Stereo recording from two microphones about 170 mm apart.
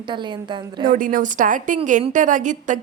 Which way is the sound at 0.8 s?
50° right (ahead or behind).